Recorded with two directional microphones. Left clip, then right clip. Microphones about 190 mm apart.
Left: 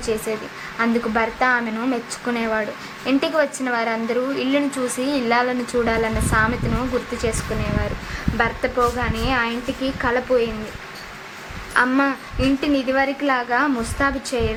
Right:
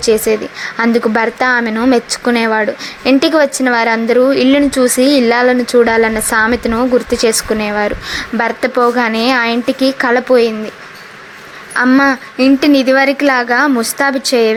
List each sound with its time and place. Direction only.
0.0 s speech: 35° right (ahead or behind)
11.7 s speech: 40° right (ahead or behind)